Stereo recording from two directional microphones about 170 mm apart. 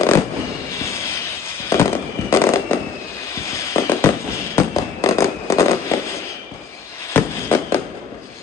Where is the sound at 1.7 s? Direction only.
20° left (ahead or behind).